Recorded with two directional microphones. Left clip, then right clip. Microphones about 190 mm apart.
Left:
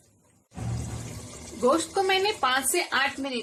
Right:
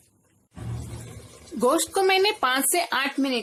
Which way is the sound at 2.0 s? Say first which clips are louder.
Right 3 dB; 60° right (ahead or behind).